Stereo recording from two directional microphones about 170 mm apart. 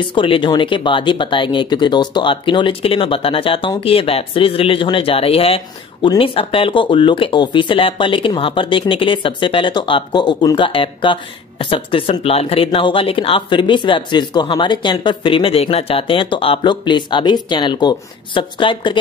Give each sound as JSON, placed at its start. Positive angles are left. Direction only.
{"t": 0.1, "sound": "speech", "side_deg": 30}